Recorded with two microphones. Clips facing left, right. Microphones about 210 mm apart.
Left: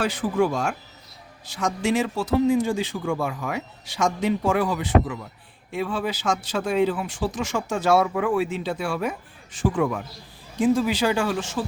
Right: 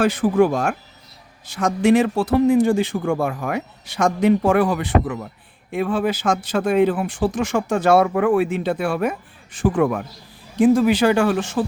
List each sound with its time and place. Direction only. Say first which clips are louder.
0.0 s speech: right 6 dB; 55° right (ahead or behind)